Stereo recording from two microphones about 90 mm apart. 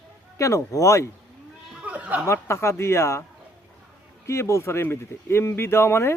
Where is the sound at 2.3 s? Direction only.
30° left (ahead or behind).